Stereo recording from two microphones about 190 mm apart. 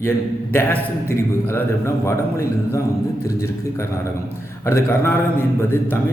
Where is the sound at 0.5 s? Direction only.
15° left (ahead or behind).